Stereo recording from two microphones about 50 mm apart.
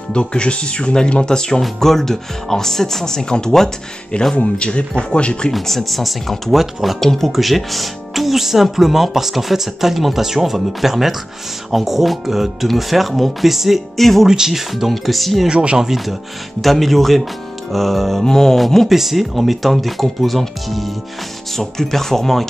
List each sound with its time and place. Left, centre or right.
0.1 s speech: centre
4.4 s speech: left
5.5 s speech: centre
14.2 s speech: centre
15.4 s speech: centre
15.8 s speech: centre